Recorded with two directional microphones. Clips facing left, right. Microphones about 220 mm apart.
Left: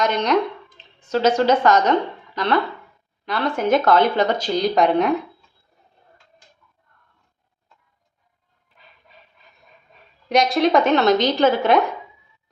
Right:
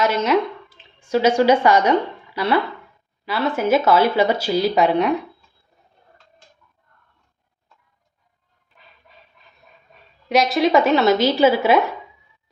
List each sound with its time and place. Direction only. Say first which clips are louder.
0.0 s speech: right 1 dB; 5° right (ahead or behind)
10.2 s speech: even; centre (ahead or behind)